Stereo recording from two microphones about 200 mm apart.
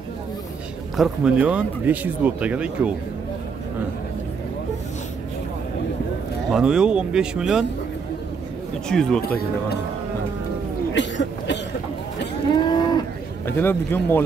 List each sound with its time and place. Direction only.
0.9 s speech: 5° right (ahead or behind)
6.5 s speech: 5° right (ahead or behind)
8.8 s speech: 5° left (ahead or behind)
11.0 s cough: 60° left (ahead or behind)
12.5 s cattle: 20° left (ahead or behind)
13.5 s a man's voice: 10° left (ahead or behind)